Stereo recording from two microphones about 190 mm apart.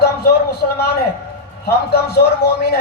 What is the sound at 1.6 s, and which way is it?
Speech, 60° left (ahead or behind).